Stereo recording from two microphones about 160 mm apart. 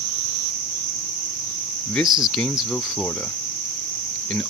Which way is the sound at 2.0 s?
30° right (ahead or behind).